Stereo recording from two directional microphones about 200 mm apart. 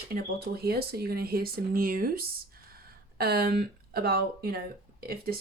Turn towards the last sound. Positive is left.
turn(degrees=-50)  # may be behind; listen again after turning